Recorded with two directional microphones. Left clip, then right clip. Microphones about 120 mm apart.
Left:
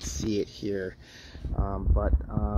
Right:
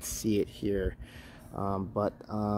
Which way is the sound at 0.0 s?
5° right (ahead or behind).